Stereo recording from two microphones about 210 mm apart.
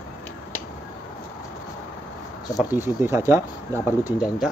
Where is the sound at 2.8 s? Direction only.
10° right (ahead or behind).